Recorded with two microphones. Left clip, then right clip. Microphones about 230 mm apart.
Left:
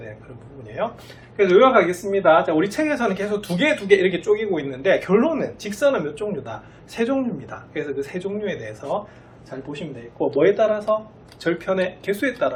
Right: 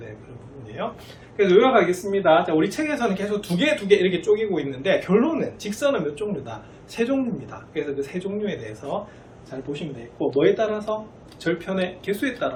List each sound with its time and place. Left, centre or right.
0.8 s speech: centre
9.7 s speech: centre